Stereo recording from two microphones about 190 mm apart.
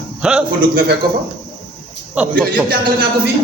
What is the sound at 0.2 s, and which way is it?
Speech, 5° right (ahead or behind).